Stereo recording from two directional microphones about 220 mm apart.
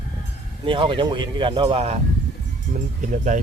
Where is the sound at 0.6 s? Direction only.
25° right (ahead or behind).